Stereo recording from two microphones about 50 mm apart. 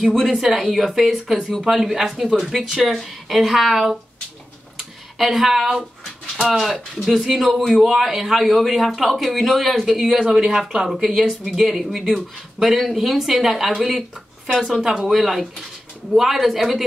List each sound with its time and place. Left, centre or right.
0.0 s speech: centre
1.6 s a man's voice: centre
4.7 s a sound: centre
6.4 s a man's voice: centre